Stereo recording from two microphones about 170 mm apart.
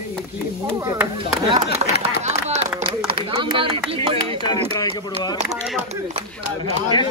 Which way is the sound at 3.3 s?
30° right (ahead or behind).